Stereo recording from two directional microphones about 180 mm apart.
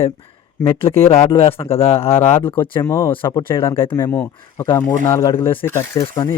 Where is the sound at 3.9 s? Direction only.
15° left (ahead or behind).